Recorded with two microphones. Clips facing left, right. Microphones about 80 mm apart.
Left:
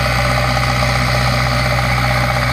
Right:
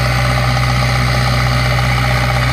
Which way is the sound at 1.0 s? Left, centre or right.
Left.